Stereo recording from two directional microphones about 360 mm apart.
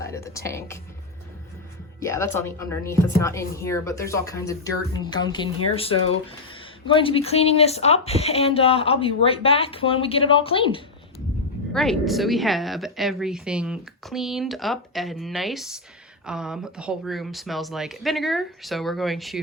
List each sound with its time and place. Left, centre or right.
0.0 s speech: centre
2.0 s speech: centre
6.5 s speech: centre
11.7 s a woman's voice: centre